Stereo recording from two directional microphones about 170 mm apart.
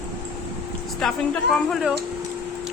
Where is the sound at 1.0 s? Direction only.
Centre (ahead or behind).